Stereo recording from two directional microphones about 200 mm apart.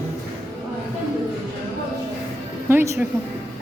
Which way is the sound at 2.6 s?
15° right (ahead or behind).